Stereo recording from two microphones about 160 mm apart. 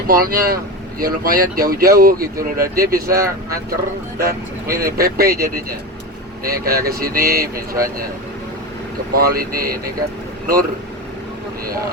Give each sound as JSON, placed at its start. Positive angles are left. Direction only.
{"t": 0.1, "sound": "speech", "side_deg": -65}
{"t": 4.2, "sound": "speech", "side_deg": -65}
{"t": 9.1, "sound": "speech", "side_deg": -65}